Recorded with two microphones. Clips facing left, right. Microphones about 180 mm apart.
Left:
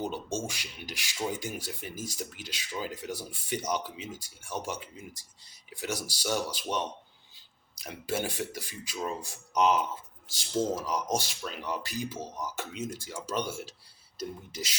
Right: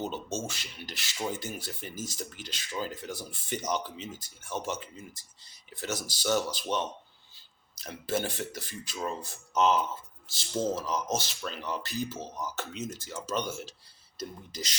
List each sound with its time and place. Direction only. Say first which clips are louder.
0.0 s speech: left 1 dB; 10° left (ahead or behind)